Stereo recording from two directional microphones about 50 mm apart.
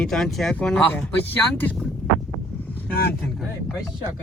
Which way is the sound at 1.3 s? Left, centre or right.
Left.